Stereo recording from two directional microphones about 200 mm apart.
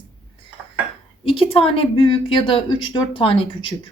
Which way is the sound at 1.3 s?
30° left (ahead or behind).